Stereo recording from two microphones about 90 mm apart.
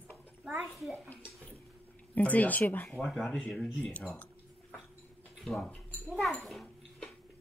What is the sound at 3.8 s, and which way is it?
Speech, 15° left (ahead or behind).